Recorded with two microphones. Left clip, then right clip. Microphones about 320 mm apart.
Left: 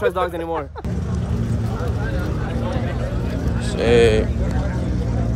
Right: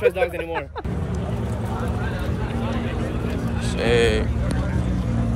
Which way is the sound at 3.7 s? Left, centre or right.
Centre.